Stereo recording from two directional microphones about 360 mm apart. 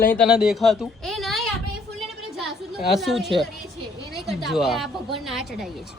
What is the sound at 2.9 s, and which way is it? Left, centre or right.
A woman's voice, centre.